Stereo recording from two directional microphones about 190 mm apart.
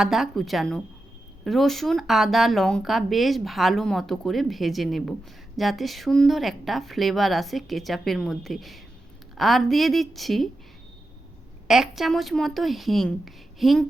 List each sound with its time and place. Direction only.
0.0 s speech: centre (ahead or behind)
11.7 s speech: centre (ahead or behind)